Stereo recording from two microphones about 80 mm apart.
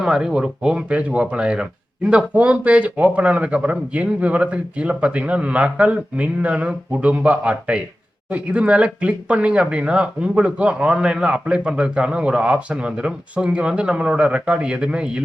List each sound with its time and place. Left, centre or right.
0.0 s speech: centre